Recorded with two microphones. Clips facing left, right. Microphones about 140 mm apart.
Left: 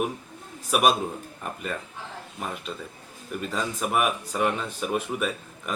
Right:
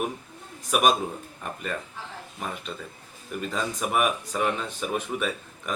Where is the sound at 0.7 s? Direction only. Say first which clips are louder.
Even; 5° left (ahead or behind).